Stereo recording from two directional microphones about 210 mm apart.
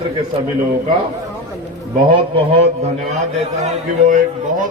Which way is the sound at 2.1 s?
30° right (ahead or behind).